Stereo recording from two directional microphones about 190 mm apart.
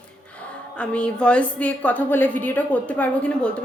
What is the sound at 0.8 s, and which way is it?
A woman's voice, 5° left (ahead or behind).